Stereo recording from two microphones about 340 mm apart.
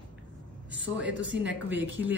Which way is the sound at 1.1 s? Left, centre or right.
Right.